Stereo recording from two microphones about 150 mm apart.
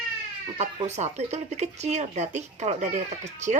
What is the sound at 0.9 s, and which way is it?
Speech, 50° right (ahead or behind).